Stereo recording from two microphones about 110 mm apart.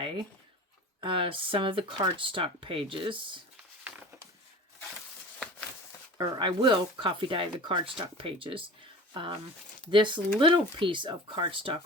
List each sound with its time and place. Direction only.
1.0 s speech: 50° right (ahead or behind)
5.4 s a sound: 10° left (ahead or behind)
6.1 s speech: 45° right (ahead or behind)
9.9 s speech: 45° right (ahead or behind)